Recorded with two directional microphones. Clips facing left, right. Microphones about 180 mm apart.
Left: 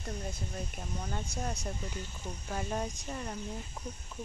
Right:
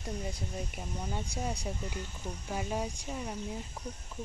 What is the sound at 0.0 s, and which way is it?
Speech, 10° right (ahead or behind).